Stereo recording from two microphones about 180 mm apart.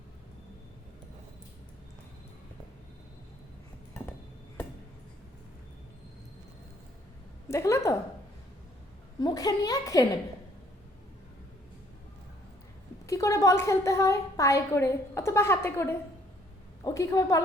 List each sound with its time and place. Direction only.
7.4 s a woman's voice: 15° left (ahead or behind)
9.2 s a woman's voice: 20° left (ahead or behind)
13.1 s a woman's voice: 20° left (ahead or behind)